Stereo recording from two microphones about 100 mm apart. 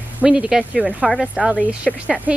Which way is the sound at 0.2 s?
10° right (ahead or behind).